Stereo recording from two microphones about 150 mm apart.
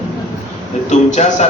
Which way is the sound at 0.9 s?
50° left (ahead or behind).